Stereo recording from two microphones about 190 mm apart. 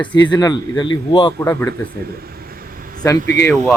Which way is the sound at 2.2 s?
55° right (ahead or behind).